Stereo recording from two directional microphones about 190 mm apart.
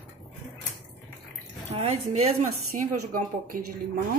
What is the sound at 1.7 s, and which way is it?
Speech, 35° right (ahead or behind).